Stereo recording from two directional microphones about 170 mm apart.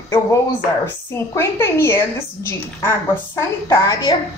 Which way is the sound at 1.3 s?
15° left (ahead or behind).